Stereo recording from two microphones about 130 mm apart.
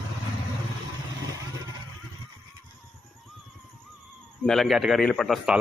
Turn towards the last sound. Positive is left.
turn(degrees=5)  # may be behind; listen again after turning